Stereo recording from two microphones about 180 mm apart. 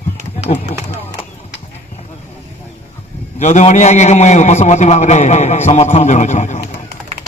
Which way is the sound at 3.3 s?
40° left (ahead or behind).